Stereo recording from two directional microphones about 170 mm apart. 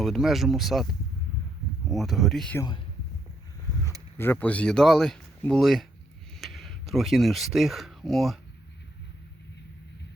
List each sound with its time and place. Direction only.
0.0 s speech: centre (ahead or behind)
1.9 s speech: centre (ahead or behind)
2.6 s speech: 25° left (ahead or behind)
4.2 s speech: 10° left (ahead or behind)